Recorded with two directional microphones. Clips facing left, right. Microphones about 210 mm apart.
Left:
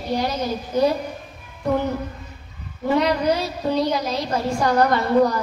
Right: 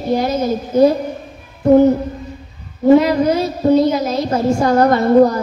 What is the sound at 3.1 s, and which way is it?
Speech, 45° right (ahead or behind).